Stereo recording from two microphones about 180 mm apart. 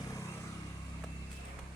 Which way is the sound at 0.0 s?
15° left (ahead or behind).